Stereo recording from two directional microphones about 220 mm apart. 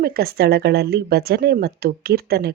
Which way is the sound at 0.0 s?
45° right (ahead or behind).